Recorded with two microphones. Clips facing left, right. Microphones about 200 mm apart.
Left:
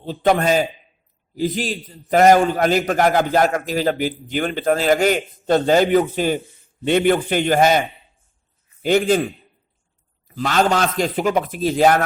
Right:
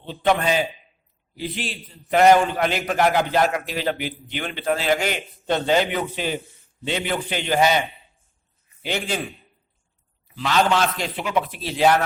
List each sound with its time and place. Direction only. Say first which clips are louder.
0.0 s a man's voice: left 4 dB; 40° left (ahead or behind)